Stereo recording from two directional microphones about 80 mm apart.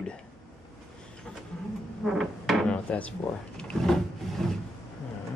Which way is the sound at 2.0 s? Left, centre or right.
Centre.